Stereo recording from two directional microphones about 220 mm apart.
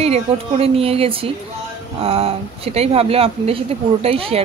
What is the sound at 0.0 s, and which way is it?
Speech, 30° right (ahead or behind).